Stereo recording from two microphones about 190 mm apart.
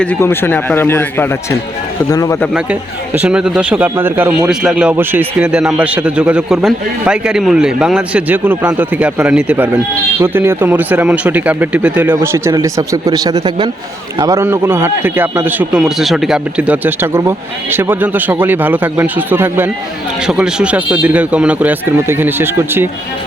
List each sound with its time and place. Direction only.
0.0 s a man's voice: 10° left (ahead or behind)
2.5 s a man's voice: 5° right (ahead or behind)